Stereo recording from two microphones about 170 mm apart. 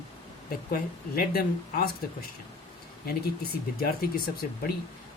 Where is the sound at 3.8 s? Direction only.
60° left (ahead or behind).